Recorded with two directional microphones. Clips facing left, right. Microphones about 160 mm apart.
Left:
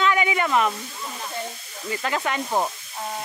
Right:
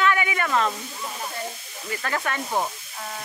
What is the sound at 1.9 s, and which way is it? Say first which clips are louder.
Speech: left 2 dB; 20° left (ahead or behind).